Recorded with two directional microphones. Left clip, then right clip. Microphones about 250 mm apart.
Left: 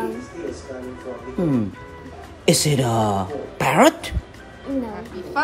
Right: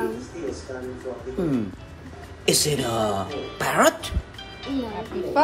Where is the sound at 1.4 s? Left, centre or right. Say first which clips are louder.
Left 4 dB; left.